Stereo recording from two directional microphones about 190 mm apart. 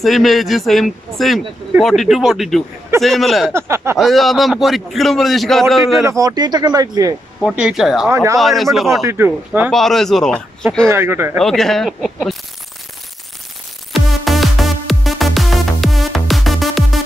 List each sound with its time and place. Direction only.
0.0 s a man's voice: centre (ahead or behind)
3.5 s speech: 15° right (ahead or behind)
4.0 s a man's voice: centre (ahead or behind)
6.0 s speech: 20° right (ahead or behind)
7.4 s a man's voice: 5° right (ahead or behind)
8.1 s speech: 15° right (ahead or behind)
8.4 s a man's voice: centre (ahead or behind)
9.0 s speech: 10° right (ahead or behind)
9.7 s a man's voice: centre (ahead or behind)
10.9 s speech: 10° right (ahead or behind)
11.3 s a man's voice: centre (ahead or behind)
13.9 s music: centre (ahead or behind)